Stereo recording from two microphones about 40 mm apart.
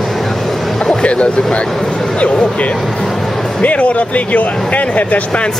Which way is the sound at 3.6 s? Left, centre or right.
Left.